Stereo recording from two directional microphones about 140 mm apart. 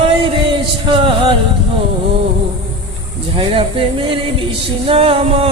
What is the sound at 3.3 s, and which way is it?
Music, 40° right (ahead or behind).